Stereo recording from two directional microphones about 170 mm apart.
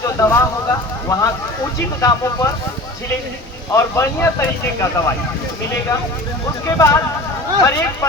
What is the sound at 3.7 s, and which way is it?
Speech, 15° left (ahead or behind).